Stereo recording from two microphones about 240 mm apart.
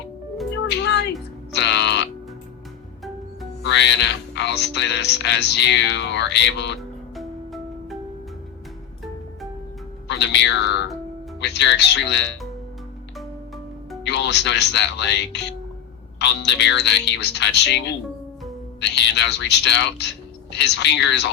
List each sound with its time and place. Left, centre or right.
0.7 s music: left
3.6 s speech: left
7.2 s music: centre
10.1 s speech: left
14.0 s speech: left